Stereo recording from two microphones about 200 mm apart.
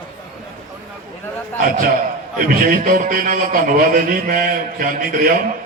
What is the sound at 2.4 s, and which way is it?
A man's voice, 45° right (ahead or behind).